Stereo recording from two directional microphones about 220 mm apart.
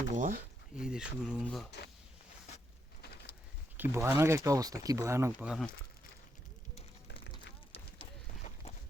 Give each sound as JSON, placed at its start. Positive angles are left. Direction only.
{"t": 0.1, "sound": "speech", "side_deg": -35}
{"t": 0.8, "sound": "speech", "side_deg": -5}
{"t": 3.8, "sound": "speech", "side_deg": -10}